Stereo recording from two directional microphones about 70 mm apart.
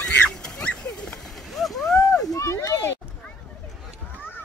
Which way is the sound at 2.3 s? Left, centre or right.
Left.